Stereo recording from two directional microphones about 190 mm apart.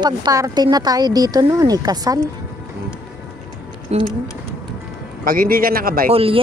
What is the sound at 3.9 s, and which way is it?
Speech, 35° right (ahead or behind).